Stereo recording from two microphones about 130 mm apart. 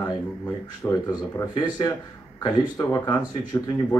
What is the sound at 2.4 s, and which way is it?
Speech, 30° left (ahead or behind).